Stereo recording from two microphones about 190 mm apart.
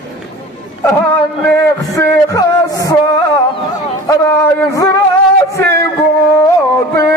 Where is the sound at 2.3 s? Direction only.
20° left (ahead or behind).